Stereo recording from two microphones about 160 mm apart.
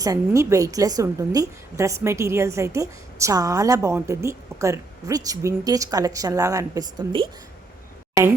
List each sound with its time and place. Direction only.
0.0 s a woman's voice: 20° right (ahead or behind)